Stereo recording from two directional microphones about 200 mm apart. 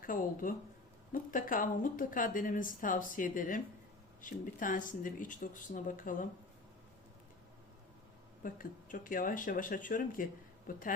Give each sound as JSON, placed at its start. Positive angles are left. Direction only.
{"t": 0.0, "sound": "a woman's voice", "side_deg": 45}
{"t": 8.4, "sound": "a woman's voice", "side_deg": 45}